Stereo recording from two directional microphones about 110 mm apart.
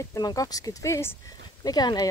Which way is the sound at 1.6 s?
35° left (ahead or behind).